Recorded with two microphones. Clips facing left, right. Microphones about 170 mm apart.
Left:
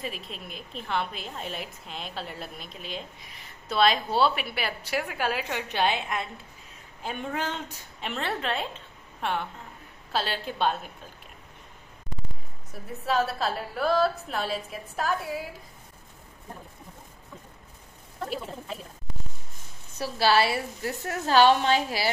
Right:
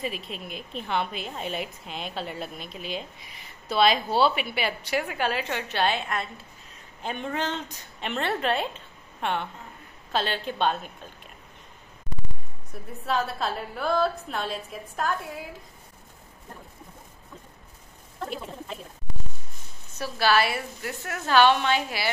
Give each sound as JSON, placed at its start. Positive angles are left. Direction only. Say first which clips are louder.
{"t": 0.0, "sound": "a woman's voice", "louder": "right 3 dB", "side_deg": -5}
{"t": 13.0, "sound": "a woman's voice", "louder": "left 1 dB", "side_deg": 0}
{"t": 20.0, "sound": "a woman's voice", "louder": "even", "side_deg": 30}